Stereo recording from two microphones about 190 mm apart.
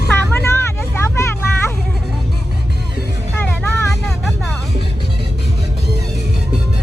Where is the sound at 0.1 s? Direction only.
15° left (ahead or behind).